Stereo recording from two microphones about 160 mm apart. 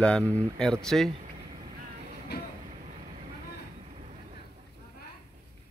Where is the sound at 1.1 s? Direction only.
40° right (ahead or behind).